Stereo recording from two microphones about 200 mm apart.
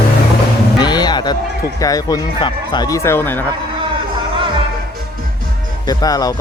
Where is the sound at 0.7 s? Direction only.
20° left (ahead or behind).